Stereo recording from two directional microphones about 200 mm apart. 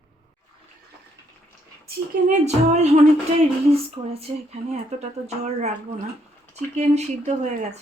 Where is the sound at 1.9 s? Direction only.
35° right (ahead or behind).